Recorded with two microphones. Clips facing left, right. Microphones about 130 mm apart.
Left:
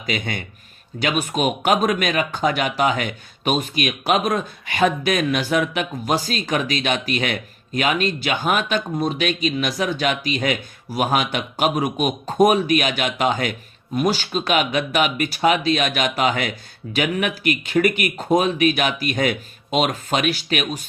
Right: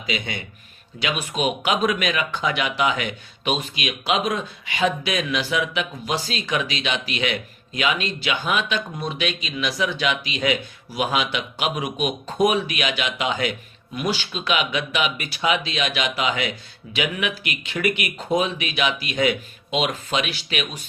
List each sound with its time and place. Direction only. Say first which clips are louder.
0.0 s speech: left 3 dB; 50° left (ahead or behind)